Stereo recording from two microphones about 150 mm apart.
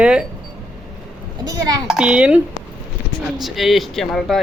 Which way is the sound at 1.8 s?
5° right (ahead or behind).